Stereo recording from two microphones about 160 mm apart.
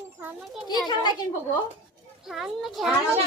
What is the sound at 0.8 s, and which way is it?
Speech, 25° left (ahead or behind).